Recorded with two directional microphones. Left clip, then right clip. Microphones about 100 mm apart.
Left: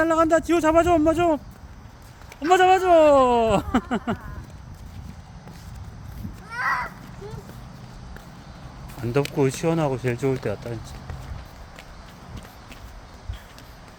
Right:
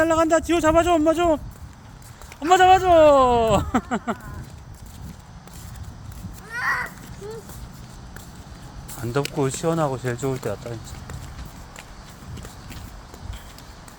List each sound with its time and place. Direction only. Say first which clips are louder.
0.0 s speech: right 1 dB; 10° left (ahead or behind)
2.5 s speech: right 2 dB; 15° left (ahead or behind)
6.6 s a sound: even; 25° left (ahead or behind)
9.4 s speech: right 1 dB; 40° left (ahead or behind)